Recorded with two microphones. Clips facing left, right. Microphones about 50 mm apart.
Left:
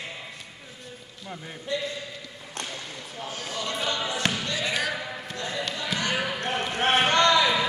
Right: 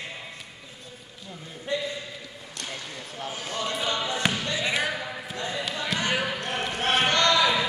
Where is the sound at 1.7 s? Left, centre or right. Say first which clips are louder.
Right 1 dB; right.